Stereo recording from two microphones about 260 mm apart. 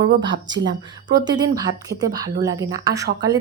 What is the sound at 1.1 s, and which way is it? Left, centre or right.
A woman's voice, centre.